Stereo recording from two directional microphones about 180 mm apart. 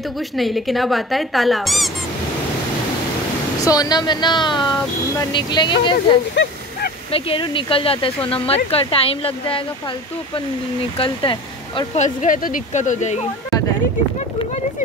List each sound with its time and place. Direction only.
0.4 s speech: centre (ahead or behind)
3.6 s speech: 20° left (ahead or behind)
6.3 s a sound: 80° left
7.1 s speech: 30° left (ahead or behind)
11.0 s speech: 30° left (ahead or behind)
12.0 s speech: 45° left (ahead or behind)